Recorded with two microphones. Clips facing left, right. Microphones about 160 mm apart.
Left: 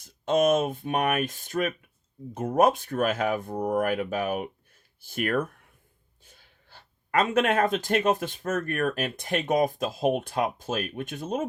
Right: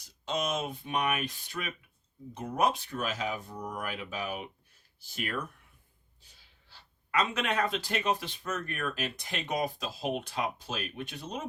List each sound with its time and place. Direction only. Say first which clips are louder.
0.0 s speech: left 11 dB; 50° left (ahead or behind)